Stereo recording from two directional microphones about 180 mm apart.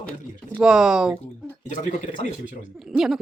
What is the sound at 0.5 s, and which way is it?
Speech, 5° right (ahead or behind).